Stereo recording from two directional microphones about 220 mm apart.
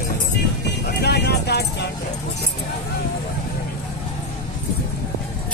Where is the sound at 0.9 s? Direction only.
45° left (ahead or behind).